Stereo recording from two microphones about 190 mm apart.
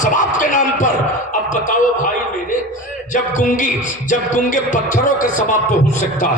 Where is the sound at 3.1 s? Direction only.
40° left (ahead or behind).